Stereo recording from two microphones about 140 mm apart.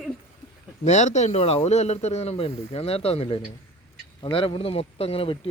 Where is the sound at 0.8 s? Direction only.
55° left (ahead or behind).